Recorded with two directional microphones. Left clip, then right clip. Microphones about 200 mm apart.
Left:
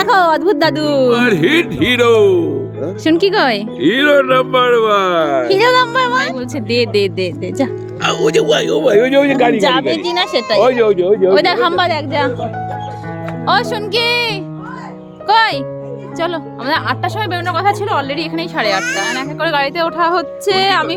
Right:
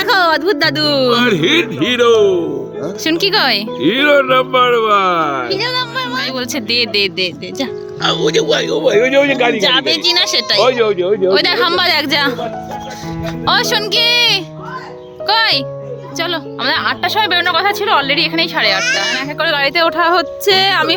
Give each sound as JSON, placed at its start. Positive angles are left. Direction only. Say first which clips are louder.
{"t": 0.0, "sound": "speech", "louder": "left 1 dB", "side_deg": 15}
{"t": 3.8, "sound": "speech", "louder": "left 1 dB", "side_deg": 5}
{"t": 5.2, "sound": "speech", "louder": "left 2 dB", "side_deg": -15}
{"t": 5.5, "sound": "music", "louder": "left 7 dB", "side_deg": 55}
{"t": 6.5, "sound": "speech", "louder": "right 1 dB", "side_deg": 10}
{"t": 9.6, "sound": "speech", "louder": "right 1 dB", "side_deg": 30}
{"t": 10.7, "sound": "speech", "louder": "left 1 dB", "side_deg": 55}
{"t": 11.2, "sound": "speech", "louder": "left 1 dB", "side_deg": 20}
{"t": 11.9, "sound": "speech", "louder": "right 3 dB", "side_deg": 0}
{"t": 13.4, "sound": "speech", "louder": "right 1 dB", "side_deg": 5}